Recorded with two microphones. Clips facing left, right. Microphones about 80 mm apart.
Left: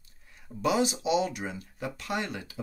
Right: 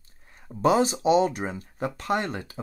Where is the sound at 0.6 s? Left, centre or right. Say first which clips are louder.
Right 5 dB; right.